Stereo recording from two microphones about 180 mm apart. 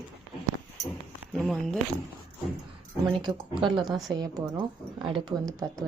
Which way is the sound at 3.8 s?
Centre (ahead or behind).